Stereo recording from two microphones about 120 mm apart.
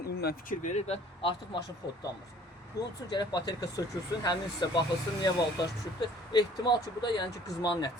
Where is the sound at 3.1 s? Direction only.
35° left (ahead or behind).